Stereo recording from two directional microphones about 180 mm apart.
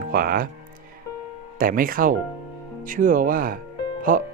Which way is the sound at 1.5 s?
50° right (ahead or behind).